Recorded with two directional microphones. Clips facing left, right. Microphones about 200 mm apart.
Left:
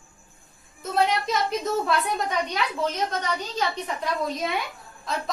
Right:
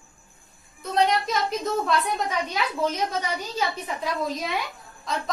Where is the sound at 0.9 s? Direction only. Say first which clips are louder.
Right 1 dB; centre (ahead or behind).